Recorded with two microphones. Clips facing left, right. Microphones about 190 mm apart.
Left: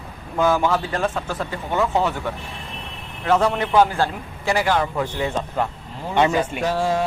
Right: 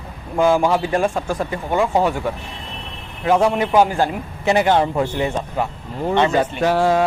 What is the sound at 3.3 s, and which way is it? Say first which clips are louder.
Speech: right 3 dB; 10° right (ahead or behind).